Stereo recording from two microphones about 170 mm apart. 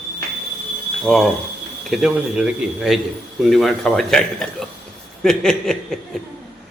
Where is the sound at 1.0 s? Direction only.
Centre (ahead or behind).